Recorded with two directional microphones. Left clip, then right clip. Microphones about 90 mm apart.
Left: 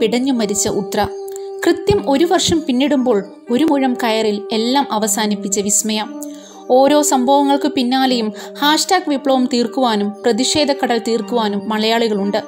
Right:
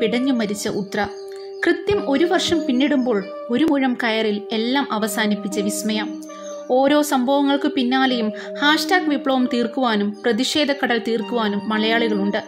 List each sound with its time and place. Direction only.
0.0 s speech: 40° left (ahead or behind)